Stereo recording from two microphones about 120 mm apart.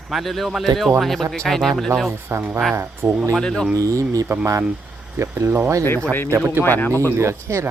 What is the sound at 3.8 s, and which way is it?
Speech, 25° right (ahead or behind).